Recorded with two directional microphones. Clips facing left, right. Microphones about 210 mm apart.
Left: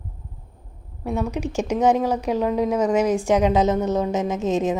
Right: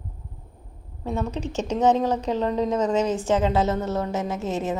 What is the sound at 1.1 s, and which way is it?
A woman's voice, 10° left (ahead or behind).